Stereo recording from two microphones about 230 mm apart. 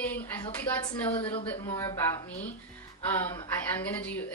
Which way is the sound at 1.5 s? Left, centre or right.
Centre.